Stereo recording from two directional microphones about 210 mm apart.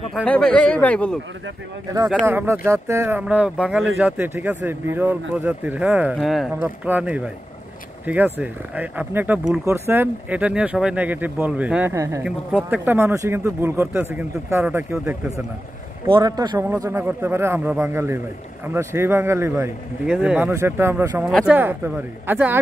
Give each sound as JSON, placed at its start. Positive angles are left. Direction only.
{"t": 0.1, "sound": "speech", "side_deg": 5}
{"t": 2.2, "sound": "a man's voice", "side_deg": -10}